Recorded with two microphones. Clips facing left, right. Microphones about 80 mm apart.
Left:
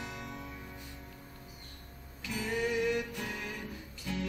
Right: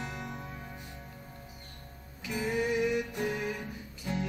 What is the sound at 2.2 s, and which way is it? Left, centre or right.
Music, right.